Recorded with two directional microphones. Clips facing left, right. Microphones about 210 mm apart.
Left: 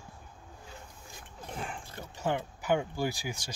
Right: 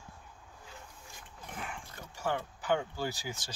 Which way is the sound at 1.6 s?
30° left (ahead or behind).